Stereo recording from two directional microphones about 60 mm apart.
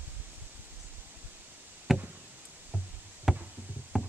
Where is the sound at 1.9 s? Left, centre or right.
Centre.